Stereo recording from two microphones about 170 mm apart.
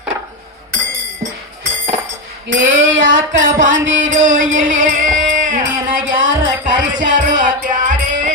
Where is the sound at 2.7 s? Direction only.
90° right.